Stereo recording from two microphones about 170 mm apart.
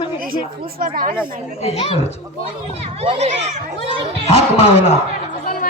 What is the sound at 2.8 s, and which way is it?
Speech, 35° right (ahead or behind).